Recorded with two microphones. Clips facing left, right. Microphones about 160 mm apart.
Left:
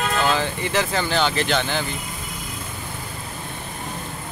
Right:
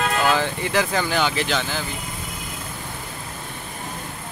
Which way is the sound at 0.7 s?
10° right (ahead or behind).